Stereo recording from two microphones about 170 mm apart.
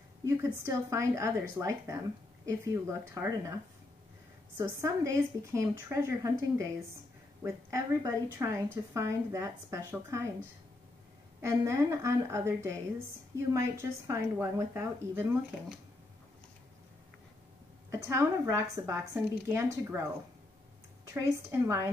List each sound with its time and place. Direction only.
0.2 s speech: 15° right (ahead or behind)
4.6 s speech: 20° right (ahead or behind)
11.4 s speech: 15° right (ahead or behind)
17.9 s speech: 15° right (ahead or behind)
21.1 s speech: 15° right (ahead or behind)